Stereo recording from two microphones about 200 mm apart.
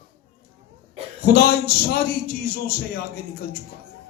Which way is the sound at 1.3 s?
50° left (ahead or behind).